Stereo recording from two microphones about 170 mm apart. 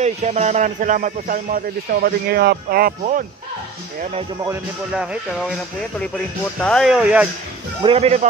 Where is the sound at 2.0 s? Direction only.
65° right (ahead or behind).